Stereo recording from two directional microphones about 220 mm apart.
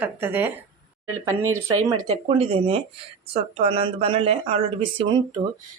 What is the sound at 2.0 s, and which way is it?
Speech, 25° right (ahead or behind).